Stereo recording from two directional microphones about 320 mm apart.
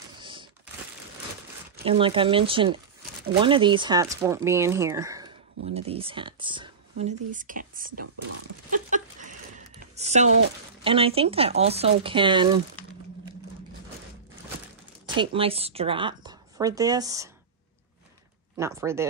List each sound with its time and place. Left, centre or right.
0.2 s a sound: centre
1.9 s speech: centre
9.8 s speech: right
15.1 s speech: centre
18.6 s speech: centre